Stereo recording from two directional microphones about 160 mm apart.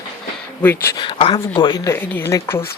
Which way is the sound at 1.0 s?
30° left (ahead or behind).